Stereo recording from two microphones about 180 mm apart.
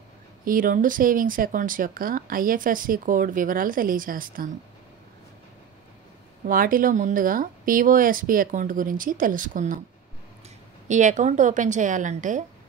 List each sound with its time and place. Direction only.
0.5 s speech: 50° right (ahead or behind)
6.4 s speech: 50° right (ahead or behind)
10.9 s speech: 40° right (ahead or behind)